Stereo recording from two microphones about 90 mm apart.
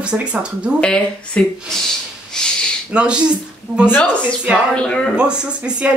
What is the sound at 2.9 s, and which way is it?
Speech, 10° right (ahead or behind).